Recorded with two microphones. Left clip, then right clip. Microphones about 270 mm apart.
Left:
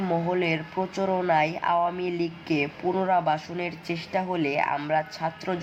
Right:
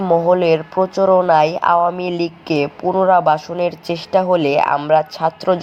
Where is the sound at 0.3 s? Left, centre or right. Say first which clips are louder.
Right 12 dB; right.